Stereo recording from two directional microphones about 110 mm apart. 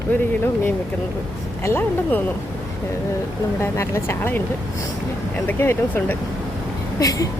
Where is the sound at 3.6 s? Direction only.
25° left (ahead or behind).